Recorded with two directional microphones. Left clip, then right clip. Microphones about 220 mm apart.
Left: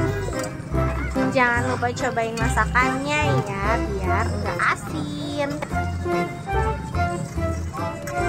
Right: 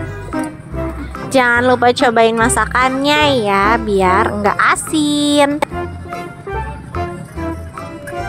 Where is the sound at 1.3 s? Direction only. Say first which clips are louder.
Right 11 dB; 45° right (ahead or behind).